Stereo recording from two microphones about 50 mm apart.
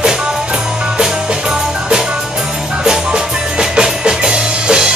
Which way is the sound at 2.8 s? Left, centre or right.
Centre.